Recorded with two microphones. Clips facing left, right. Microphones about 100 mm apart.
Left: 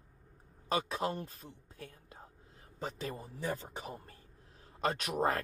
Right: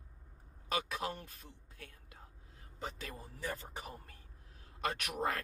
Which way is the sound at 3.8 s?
30° left (ahead or behind).